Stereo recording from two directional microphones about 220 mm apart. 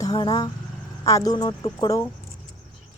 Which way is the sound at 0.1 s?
20° left (ahead or behind).